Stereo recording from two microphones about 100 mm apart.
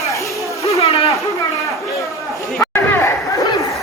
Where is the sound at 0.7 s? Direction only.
90° left.